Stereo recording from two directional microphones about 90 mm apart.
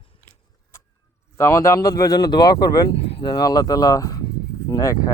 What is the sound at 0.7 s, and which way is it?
Chicken, 30° left (ahead or behind).